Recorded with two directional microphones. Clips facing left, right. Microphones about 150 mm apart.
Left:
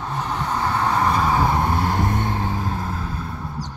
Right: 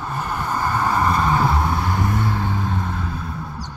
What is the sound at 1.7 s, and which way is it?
Vehicle, 40° left (ahead or behind).